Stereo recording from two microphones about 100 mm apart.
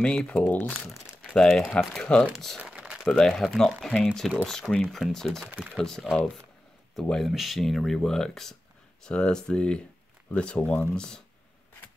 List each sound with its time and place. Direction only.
0.0 s speech: 10° left (ahead or behind)
0.8 s crumpling: centre (ahead or behind)
1.8 s speech: centre (ahead or behind)
2.6 s a sound: 10° right (ahead or behind)
3.1 s speech: 5° left (ahead or behind)